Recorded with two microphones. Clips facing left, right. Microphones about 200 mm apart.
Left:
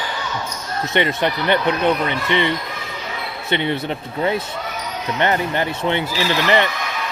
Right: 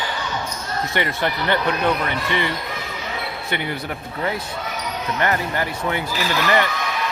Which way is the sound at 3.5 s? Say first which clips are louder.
Left 7 dB; 25° left (ahead or behind).